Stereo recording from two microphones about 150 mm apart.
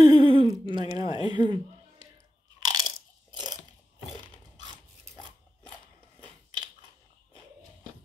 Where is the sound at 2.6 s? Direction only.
25° right (ahead or behind).